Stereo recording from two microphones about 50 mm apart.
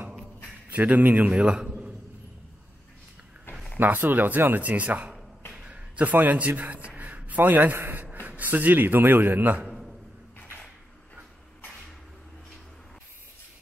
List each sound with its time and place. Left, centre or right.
0.7 s a man's voice: right; by 1.9 s centre
3.7 s speech: right
5.5 s a sound: right
6.0 s a man's voice: right